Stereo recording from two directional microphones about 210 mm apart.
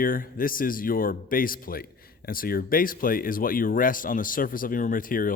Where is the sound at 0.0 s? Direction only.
40° left (ahead or behind).